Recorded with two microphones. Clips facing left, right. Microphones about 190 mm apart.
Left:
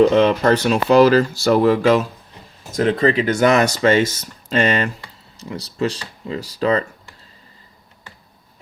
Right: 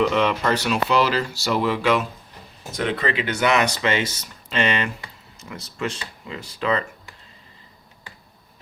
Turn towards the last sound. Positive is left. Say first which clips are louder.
# left 5 dB
turn(degrees=40)  # may be behind; listen again after turning